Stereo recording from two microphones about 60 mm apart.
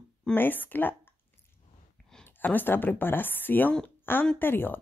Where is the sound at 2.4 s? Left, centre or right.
Left.